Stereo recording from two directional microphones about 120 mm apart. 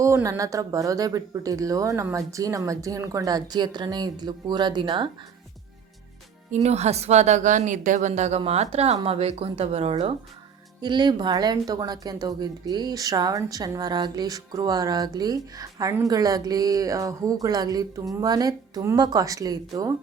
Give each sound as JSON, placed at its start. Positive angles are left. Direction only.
{"t": 0.0, "sound": "speech", "side_deg": -25}
{"t": 6.5, "sound": "a woman's voice", "side_deg": -65}
{"t": 8.4, "sound": "speech", "side_deg": -60}
{"t": 10.8, "sound": "speech", "side_deg": -40}